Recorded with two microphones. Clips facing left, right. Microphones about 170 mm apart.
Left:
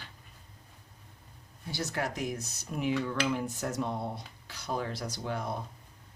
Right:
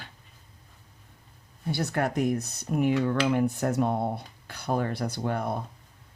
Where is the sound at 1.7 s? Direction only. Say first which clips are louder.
Right 6 dB; 60° right (ahead or behind).